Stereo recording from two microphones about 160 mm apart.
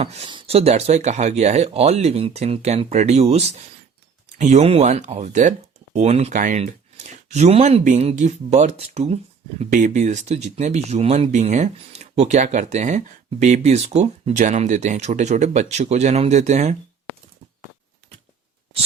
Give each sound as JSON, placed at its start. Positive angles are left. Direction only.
{"t": 0.0, "sound": "speech", "side_deg": -40}